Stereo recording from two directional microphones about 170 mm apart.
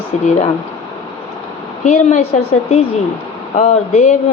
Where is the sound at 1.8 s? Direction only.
40° left (ahead or behind).